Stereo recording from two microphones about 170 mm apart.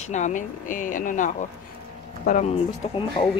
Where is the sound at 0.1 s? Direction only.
45° left (ahead or behind).